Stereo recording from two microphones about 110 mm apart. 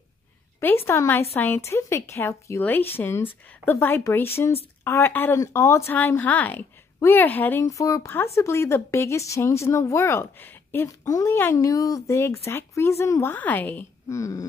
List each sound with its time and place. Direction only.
0.6 s speech: 20° left (ahead or behind)
7.6 s speech: 30° left (ahead or behind)
14.0 s speech: 30° left (ahead or behind)